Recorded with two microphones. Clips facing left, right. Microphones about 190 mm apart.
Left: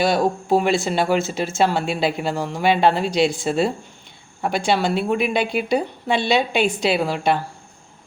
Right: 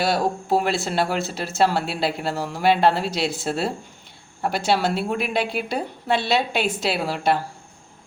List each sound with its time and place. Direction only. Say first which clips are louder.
0.0 s a woman's voice: left 3 dB; centre (ahead or behind)